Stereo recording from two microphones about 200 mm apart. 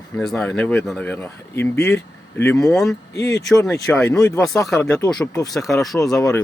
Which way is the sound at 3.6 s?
10° left (ahead or behind).